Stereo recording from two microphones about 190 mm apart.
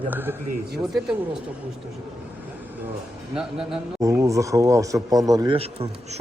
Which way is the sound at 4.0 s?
15° right (ahead or behind).